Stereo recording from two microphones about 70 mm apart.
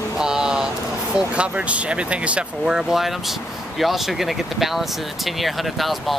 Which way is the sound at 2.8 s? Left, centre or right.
Centre.